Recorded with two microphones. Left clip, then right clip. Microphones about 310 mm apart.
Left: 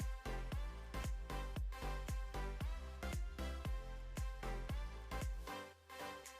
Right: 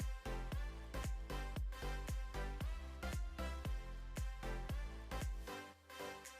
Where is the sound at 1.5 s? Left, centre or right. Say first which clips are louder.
Even; centre.